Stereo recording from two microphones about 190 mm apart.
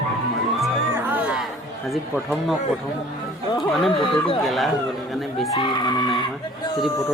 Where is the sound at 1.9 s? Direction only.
Centre (ahead or behind).